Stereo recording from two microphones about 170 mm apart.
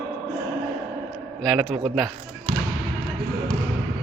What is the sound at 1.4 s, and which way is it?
Speech, centre (ahead or behind).